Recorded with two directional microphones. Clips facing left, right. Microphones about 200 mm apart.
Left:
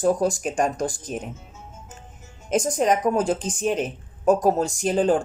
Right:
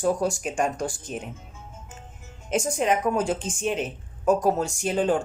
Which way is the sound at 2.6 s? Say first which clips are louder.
Left 2 dB; 40° left (ahead or behind).